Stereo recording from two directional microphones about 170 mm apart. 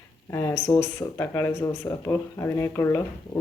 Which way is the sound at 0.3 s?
15° left (ahead or behind).